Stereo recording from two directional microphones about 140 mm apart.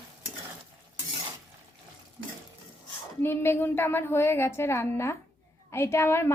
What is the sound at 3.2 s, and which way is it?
A woman's voice, 15° left (ahead or behind).